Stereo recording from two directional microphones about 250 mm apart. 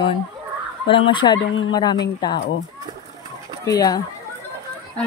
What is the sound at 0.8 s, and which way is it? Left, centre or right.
Fowl, centre.